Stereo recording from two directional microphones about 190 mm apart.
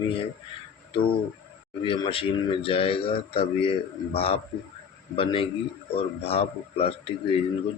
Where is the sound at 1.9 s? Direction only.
30° left (ahead or behind).